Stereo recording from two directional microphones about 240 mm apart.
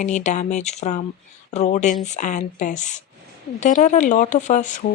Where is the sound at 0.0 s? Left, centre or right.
Left.